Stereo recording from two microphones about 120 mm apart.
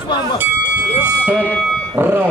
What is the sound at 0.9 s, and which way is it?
Speech, 15° right (ahead or behind).